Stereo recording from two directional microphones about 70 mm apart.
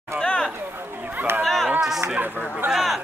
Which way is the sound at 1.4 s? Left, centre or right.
Centre.